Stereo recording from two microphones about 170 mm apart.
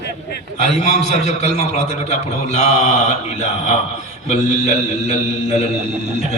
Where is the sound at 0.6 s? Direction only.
40° left (ahead or behind).